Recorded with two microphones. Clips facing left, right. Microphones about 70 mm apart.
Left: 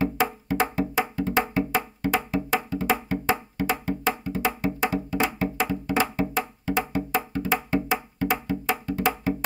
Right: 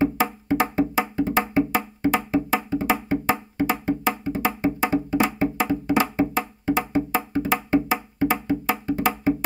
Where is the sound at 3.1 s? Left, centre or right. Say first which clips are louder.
Right 3 dB; right.